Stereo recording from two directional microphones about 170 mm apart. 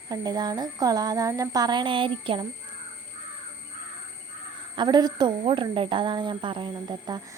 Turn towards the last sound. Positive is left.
turn(degrees=-25)  # may be behind; listen again after turning